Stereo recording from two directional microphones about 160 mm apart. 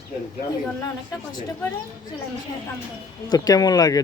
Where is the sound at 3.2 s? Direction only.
25° left (ahead or behind).